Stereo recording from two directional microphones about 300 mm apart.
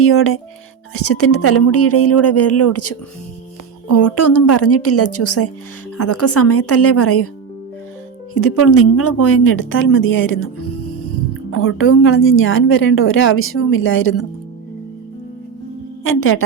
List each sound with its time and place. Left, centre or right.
0.0 s speech: left
8.3 s speech: left
11.5 s a woman's voice: left
16.0 s speech: left